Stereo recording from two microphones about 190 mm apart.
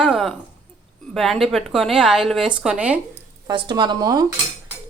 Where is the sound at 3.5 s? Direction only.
20° right (ahead or behind).